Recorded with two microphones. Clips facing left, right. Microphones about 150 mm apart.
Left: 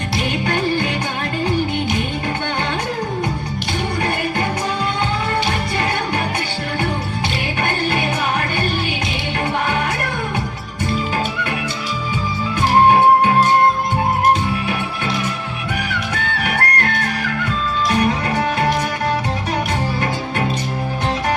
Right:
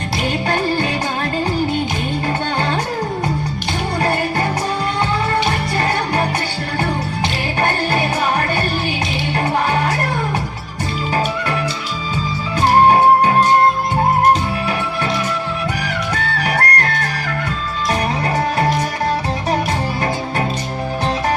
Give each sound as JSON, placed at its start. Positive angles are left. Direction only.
{"t": 0.4, "sound": "music", "side_deg": -35}
{"t": 7.6, "sound": "music", "side_deg": -35}
{"t": 16.1, "sound": "music", "side_deg": -35}